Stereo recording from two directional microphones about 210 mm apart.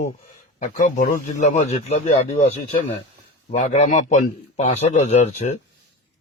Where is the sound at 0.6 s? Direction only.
40° left (ahead or behind).